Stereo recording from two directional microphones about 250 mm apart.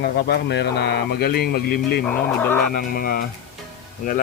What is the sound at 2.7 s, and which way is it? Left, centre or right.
Speech, left.